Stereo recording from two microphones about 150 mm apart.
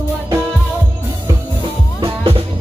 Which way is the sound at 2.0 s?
40° right (ahead or behind).